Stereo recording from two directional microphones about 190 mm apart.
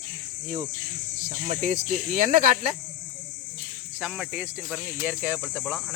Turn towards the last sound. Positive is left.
turn(degrees=-10)  # may be behind; listen again after turning